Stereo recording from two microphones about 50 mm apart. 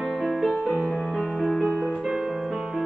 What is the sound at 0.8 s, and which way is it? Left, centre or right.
Music, centre.